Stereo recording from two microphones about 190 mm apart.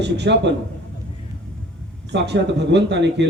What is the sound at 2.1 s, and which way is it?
Speech, 65° right (ahead or behind).